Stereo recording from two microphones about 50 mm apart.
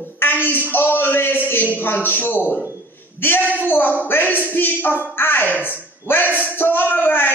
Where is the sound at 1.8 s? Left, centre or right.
Left.